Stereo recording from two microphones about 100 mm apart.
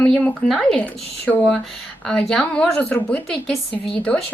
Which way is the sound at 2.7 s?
15° left (ahead or behind).